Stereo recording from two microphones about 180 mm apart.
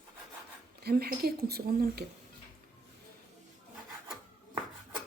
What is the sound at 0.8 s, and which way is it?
Speech, 60° right (ahead or behind).